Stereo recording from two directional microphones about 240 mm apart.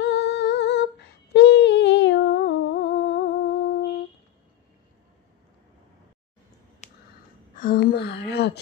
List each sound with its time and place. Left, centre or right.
0.0 s humming: left
6.8 s a sound: left
7.5 s speech: left